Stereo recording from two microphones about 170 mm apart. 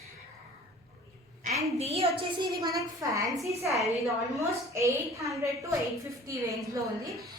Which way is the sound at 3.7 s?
Centre (ahead or behind).